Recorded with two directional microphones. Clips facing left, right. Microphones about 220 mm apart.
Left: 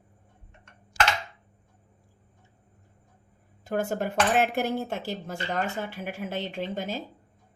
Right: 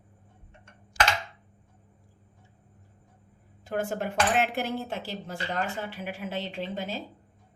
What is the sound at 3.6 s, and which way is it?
Speech, 40° left (ahead or behind).